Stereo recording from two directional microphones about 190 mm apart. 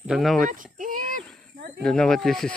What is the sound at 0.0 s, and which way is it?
Speech, centre (ahead or behind).